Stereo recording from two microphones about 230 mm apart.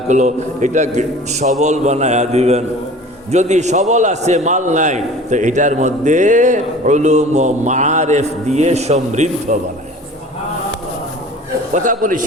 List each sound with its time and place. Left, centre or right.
0.1 s a man's voice: right
11.7 s a man's voice: right